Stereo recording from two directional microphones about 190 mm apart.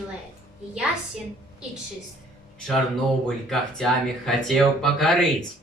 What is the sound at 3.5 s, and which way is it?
Speech, centre (ahead or behind).